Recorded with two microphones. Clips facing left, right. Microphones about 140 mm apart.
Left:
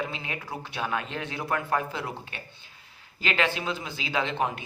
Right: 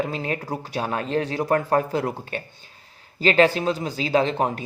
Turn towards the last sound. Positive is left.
turn(degrees=-40)  # may be behind; listen again after turning